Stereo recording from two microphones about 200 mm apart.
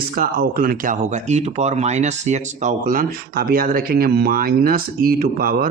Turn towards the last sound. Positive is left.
turn(degrees=-50)  # may be behind; listen again after turning